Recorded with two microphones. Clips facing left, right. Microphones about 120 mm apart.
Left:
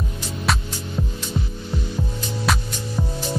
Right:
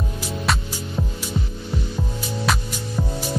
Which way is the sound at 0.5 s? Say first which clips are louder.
Left 1 dB; centre (ahead or behind).